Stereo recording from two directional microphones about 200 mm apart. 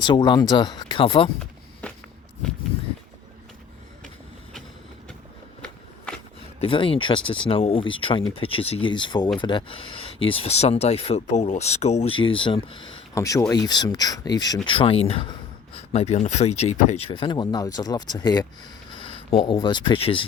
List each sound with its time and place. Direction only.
0.0 s speech: 20° left (ahead or behind)
1.8 s walk: 5° left (ahead or behind)
6.6 s speech: 25° left (ahead or behind)